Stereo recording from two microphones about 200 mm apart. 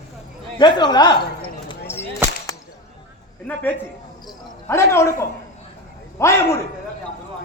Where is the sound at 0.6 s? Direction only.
20° left (ahead or behind).